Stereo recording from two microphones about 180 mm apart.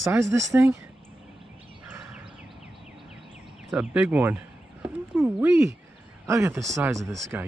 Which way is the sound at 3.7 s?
10° right (ahead or behind).